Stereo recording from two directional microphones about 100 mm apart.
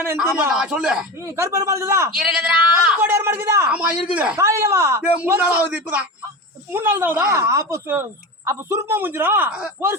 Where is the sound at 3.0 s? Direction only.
25° right (ahead or behind).